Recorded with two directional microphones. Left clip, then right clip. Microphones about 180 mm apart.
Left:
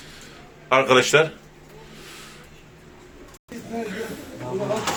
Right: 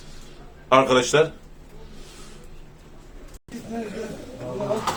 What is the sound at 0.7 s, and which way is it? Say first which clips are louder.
Speech: left 1 dB; 10° left (ahead or behind).